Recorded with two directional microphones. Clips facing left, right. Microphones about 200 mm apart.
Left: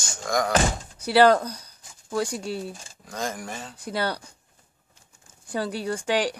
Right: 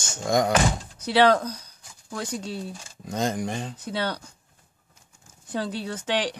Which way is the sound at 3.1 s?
20° right (ahead or behind).